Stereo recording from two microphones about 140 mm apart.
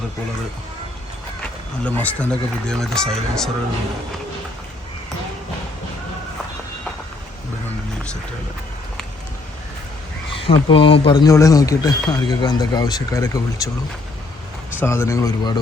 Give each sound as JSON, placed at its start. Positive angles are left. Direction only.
{"t": 1.4, "sound": "speech", "side_deg": 10}
{"t": 10.3, "sound": "speech", "side_deg": 40}
{"t": 14.8, "sound": "speech", "side_deg": 20}